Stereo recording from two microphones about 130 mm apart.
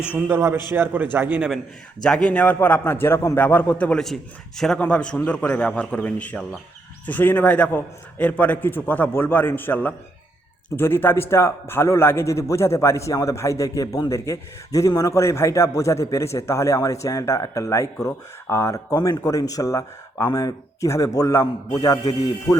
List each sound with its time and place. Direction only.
0.0 s a man's voice: 15° right (ahead or behind)
2.0 s a man's voice: 5° left (ahead or behind); by 21.9 s 25° left (ahead or behind)